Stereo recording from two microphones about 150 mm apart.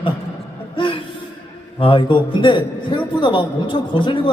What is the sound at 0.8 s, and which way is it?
Gasp, 35° left (ahead or behind).